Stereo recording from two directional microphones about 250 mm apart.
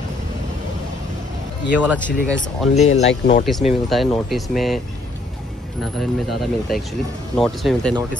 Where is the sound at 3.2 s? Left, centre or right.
Left.